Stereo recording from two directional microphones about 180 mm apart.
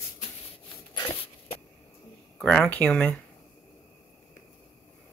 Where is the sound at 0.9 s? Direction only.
25° left (ahead or behind).